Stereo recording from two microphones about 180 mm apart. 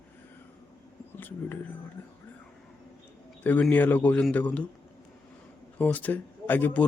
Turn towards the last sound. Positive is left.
turn(degrees=10)  # may be behind; listen again after turning